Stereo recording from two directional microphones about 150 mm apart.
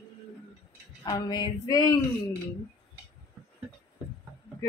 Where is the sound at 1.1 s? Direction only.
30° left (ahead or behind).